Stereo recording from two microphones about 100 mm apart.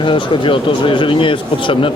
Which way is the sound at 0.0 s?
60° left (ahead or behind).